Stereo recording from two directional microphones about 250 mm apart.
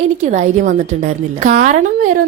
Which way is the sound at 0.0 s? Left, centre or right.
Right.